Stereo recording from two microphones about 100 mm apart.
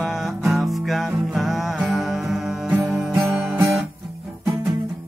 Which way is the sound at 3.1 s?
30° right (ahead or behind).